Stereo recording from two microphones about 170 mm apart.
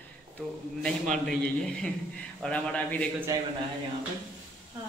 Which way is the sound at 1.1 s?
5° left (ahead or behind).